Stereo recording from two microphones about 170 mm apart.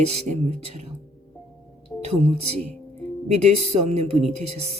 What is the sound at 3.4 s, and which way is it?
Speech, 40° right (ahead or behind).